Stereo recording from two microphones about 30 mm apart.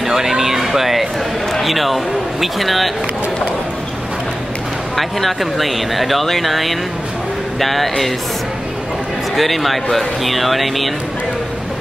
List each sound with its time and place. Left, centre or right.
0.0 s speech: centre
1.5 s a sound: centre
2.4 s speech: centre
4.9 s speech: centre
9.3 s speech: centre